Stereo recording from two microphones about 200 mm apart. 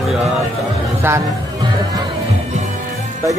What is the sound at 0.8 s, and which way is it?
Speech, 15° right (ahead or behind).